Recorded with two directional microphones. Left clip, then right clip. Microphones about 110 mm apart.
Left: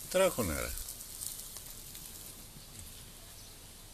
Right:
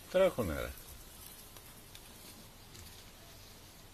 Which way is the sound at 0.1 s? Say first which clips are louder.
Even; 25° left (ahead or behind).